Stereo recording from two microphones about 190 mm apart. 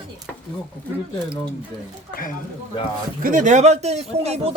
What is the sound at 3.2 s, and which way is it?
Speech, 45° right (ahead or behind).